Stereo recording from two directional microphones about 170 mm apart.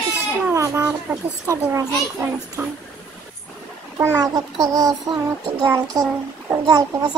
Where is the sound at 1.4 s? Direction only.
15° right (ahead or behind).